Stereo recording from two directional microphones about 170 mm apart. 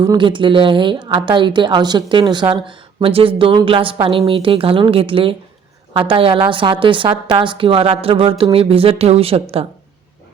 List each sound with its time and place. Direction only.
0.0 s a woman's voice: 25° right (ahead or behind)